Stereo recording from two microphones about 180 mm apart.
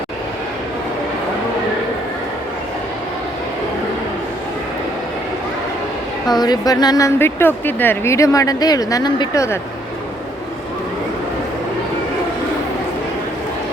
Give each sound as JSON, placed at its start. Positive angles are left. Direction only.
{"t": 6.3, "sound": "speech", "side_deg": 20}